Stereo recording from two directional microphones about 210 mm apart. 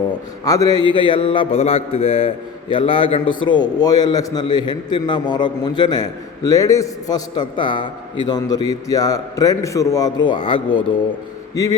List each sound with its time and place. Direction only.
0.4 s a man's voice: 15° left (ahead or behind)